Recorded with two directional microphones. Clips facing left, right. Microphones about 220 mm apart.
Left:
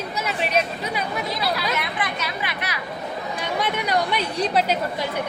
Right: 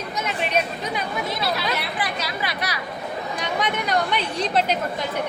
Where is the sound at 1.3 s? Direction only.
25° right (ahead or behind).